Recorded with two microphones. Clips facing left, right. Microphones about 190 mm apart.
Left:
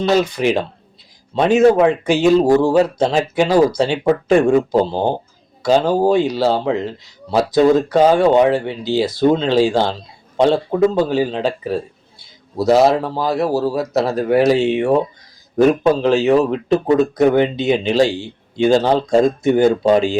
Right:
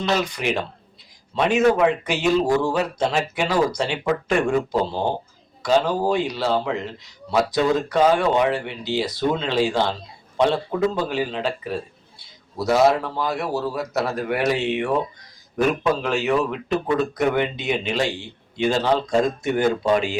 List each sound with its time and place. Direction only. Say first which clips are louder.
0.1 s a man's voice: left 7 dB; 35° left (ahead or behind)